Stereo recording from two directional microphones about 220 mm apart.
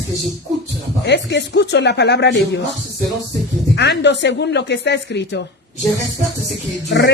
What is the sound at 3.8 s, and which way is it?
Speech, 50° left (ahead or behind).